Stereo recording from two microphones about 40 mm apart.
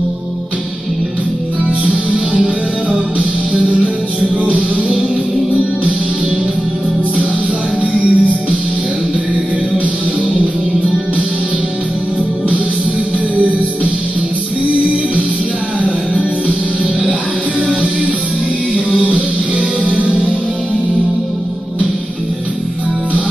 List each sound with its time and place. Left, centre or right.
1.9 s music: right
4.6 s music: right
7.8 s music: right
13.4 s music: right
15.8 s music: right
19.8 s music: right